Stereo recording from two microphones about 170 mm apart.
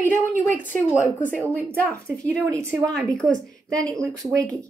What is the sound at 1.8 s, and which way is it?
Speech, 15° right (ahead or behind).